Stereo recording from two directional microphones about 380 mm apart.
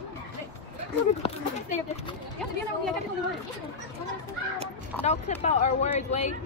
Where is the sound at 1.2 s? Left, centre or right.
Centre.